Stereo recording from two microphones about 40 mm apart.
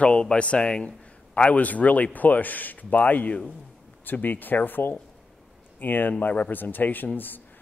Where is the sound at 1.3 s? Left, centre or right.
Left.